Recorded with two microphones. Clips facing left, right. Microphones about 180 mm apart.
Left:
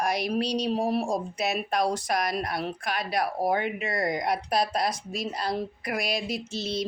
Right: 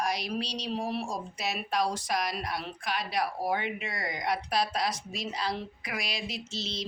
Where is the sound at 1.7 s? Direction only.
55° left (ahead or behind).